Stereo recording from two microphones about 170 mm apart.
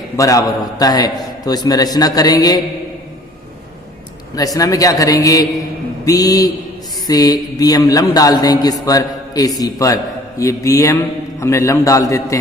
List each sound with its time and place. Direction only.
0.2 s a man's voice: 20° left (ahead or behind)
4.4 s a man's voice: 20° left (ahead or behind)